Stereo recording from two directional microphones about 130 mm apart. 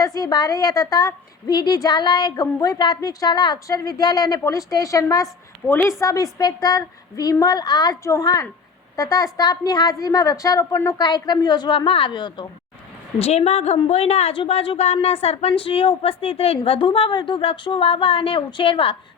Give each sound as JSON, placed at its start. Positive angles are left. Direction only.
{"t": 0.0, "sound": "a woman's voice", "side_deg": 30}
{"t": 6.0, "sound": "a woman's voice", "side_deg": 25}
{"t": 13.1, "sound": "a woman's voice", "side_deg": 50}